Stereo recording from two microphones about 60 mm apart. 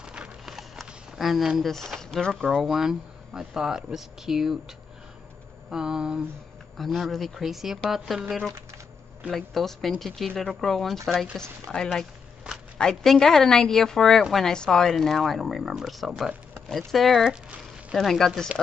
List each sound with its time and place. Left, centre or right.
0.0 s clip-clop: centre
0.6 s a sound: centre
1.6 s speech: centre
2.6 s speech: centre
5.7 s speech: centre
6.8 s speech: centre
9.3 s speech: centre